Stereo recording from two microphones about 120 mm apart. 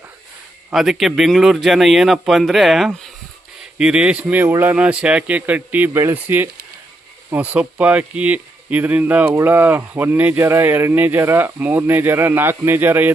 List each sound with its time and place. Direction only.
0.7 s speech: 5° right (ahead or behind)